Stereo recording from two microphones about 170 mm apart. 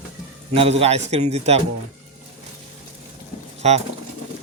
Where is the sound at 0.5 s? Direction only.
35° right (ahead or behind).